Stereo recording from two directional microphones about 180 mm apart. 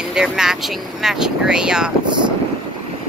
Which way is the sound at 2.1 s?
25° right (ahead or behind).